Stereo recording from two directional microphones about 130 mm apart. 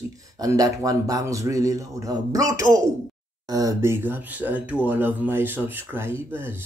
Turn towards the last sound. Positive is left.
turn(degrees=-20)  # may be behind; listen again after turning